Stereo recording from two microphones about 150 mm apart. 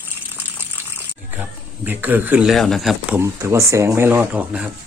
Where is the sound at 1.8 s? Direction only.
10° right (ahead or behind).